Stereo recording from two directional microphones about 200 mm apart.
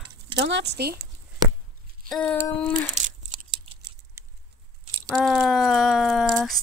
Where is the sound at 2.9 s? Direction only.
35° right (ahead or behind).